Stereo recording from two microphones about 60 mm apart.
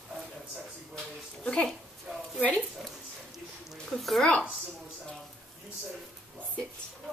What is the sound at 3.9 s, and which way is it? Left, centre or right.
Speech, centre.